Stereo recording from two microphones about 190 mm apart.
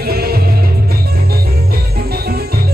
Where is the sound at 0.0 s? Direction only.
55° right (ahead or behind).